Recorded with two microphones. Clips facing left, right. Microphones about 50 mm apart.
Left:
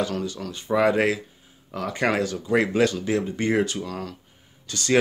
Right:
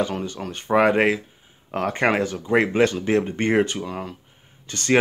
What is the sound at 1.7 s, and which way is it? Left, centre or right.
Speech, right.